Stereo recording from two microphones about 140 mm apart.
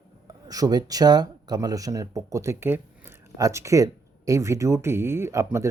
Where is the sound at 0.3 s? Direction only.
25° right (ahead or behind).